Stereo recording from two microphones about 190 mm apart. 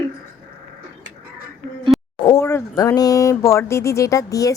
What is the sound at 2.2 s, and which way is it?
Speech, 20° left (ahead or behind).